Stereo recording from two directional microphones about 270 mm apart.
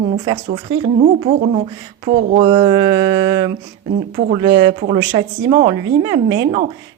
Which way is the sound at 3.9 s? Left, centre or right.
Right.